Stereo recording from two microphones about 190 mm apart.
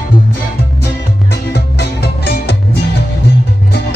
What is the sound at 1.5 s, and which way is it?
Music, 60° left (ahead or behind).